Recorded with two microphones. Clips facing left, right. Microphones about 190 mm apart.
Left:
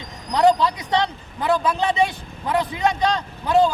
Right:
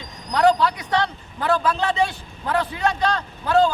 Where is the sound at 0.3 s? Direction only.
20° left (ahead or behind).